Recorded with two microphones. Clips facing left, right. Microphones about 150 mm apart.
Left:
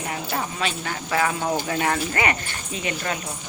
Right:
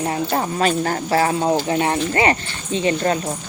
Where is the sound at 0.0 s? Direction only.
35° right (ahead or behind).